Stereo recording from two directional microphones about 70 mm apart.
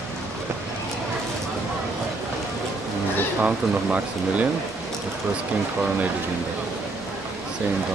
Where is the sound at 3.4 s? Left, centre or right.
Centre.